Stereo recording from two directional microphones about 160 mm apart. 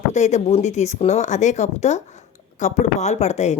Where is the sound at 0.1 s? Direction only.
45° left (ahead or behind).